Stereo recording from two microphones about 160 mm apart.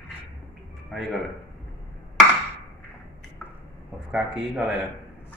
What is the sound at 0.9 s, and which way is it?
Speech, centre (ahead or behind).